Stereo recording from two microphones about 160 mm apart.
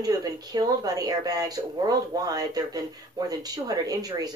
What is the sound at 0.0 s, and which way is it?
Speech, 25° right (ahead or behind).